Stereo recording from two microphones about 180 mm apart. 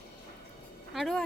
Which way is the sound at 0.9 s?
Centre (ahead or behind).